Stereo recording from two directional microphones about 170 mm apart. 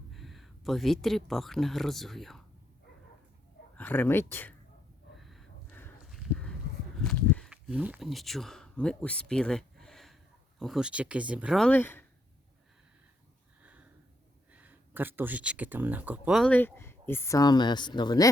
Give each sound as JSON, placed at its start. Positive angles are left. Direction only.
{"t": 0.1, "sound": "speech", "side_deg": 0}
{"t": 3.8, "sound": "speech", "side_deg": 10}
{"t": 5.1, "sound": "a sound", "side_deg": 0}
{"t": 7.5, "sound": "speech", "side_deg": -10}
{"t": 13.6, "sound": "a sound", "side_deg": -10}
{"t": 14.5, "sound": "speech", "side_deg": -10}
{"t": 16.5, "sound": "speech", "side_deg": 10}